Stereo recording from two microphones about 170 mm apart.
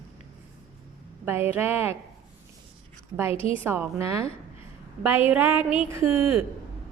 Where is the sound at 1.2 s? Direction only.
15° right (ahead or behind).